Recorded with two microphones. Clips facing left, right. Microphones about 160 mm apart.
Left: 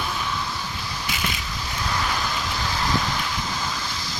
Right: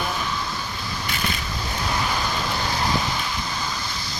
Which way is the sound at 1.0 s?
10° left (ahead or behind).